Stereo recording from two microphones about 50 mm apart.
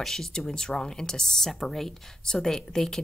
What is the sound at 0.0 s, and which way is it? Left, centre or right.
Speech, centre.